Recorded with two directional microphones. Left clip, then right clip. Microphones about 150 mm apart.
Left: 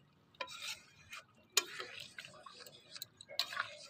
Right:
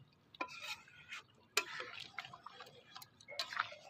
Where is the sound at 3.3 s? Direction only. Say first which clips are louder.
Left 1 dB; centre (ahead or behind).